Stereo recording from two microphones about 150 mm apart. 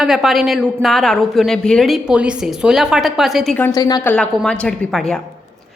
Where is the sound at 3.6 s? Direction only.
25° left (ahead or behind).